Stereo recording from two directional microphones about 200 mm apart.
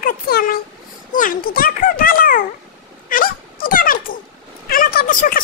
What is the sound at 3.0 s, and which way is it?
Dog, 45° left (ahead or behind).